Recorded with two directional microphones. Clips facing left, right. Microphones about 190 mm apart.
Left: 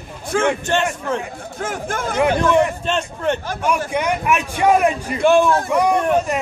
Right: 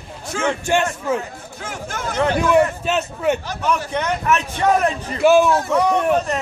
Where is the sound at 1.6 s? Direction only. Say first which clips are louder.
Left 4 dB; 50° left (ahead or behind).